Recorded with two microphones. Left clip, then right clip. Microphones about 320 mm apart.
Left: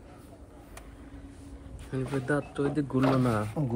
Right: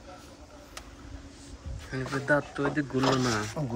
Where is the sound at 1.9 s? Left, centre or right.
Centre.